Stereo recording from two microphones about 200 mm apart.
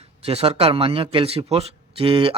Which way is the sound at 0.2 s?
30° right (ahead or behind).